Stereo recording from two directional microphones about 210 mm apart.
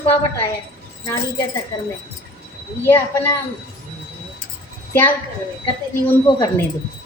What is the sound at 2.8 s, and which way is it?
Speech, 10° left (ahead or behind).